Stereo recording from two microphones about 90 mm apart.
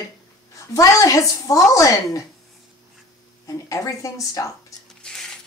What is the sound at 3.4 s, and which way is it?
A woman's voice, 40° left (ahead or behind).